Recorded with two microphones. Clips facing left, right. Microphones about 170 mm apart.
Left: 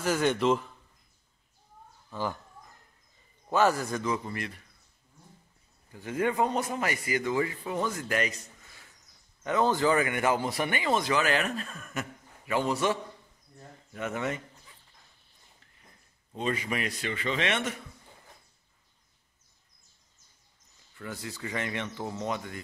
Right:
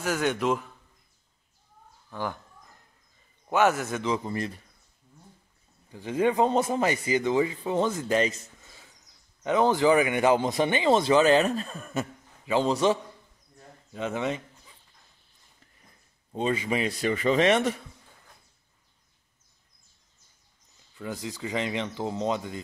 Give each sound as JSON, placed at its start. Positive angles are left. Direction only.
{"t": 0.0, "sound": "a man's voice", "side_deg": -10}
{"t": 3.4, "sound": "a man's voice", "side_deg": -15}
{"t": 5.9, "sound": "speech", "side_deg": -20}
{"t": 16.3, "sound": "speech", "side_deg": -30}
{"t": 17.0, "sound": "speech", "side_deg": -40}
{"t": 21.0, "sound": "speech", "side_deg": -20}